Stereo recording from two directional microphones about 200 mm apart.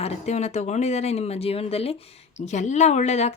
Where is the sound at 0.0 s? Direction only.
35° left (ahead or behind).